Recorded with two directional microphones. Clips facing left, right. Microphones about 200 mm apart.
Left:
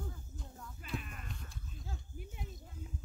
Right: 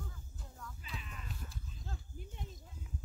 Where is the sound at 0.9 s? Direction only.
55° left (ahead or behind).